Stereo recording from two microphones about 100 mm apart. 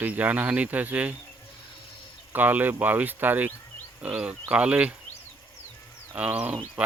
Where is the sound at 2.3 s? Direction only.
20° right (ahead or behind).